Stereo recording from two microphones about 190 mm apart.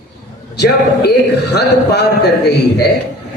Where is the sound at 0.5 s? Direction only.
60° left (ahead or behind).